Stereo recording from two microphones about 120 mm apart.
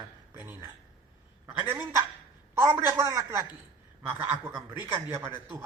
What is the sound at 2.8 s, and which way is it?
Speech, 25° right (ahead or behind).